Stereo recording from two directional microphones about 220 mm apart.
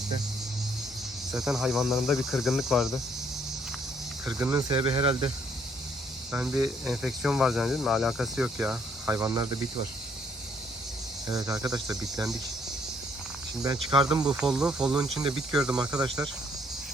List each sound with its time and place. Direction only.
1.3 s speech: centre (ahead or behind)
4.3 s speech: 15° right (ahead or behind)
6.3 s speech: 10° right (ahead or behind)
11.3 s speech: 15° right (ahead or behind)
13.6 s speech: 20° right (ahead or behind)
14.3 s speech: 5° right (ahead or behind)
15.7 s speech: 15° right (ahead or behind)